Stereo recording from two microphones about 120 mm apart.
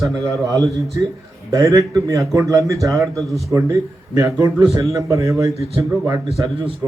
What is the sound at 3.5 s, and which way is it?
A man's voice, 25° right (ahead or behind).